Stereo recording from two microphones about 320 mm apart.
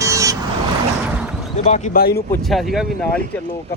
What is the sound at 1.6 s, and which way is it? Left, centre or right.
Speech, left.